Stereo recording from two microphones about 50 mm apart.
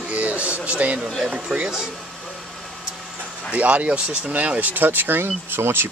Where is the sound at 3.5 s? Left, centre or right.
Right.